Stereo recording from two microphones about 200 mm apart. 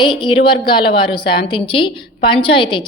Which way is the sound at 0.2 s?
25° left (ahead or behind).